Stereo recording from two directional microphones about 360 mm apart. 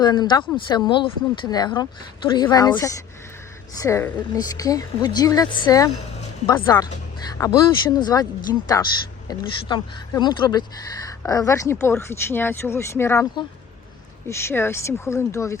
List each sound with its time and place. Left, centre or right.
0.0 s speech: centre